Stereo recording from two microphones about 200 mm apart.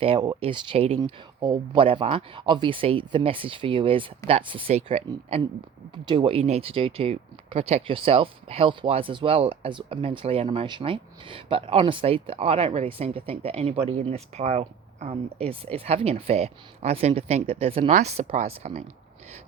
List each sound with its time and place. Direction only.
0.0 s speech: 25° right (ahead or behind)